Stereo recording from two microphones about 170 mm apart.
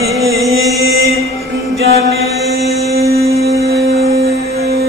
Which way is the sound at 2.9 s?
65° right (ahead or behind).